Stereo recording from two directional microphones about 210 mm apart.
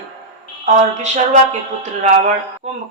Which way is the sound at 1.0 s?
35° right (ahead or behind).